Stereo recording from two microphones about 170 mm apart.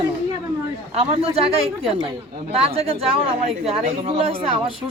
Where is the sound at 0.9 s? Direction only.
35° right (ahead or behind).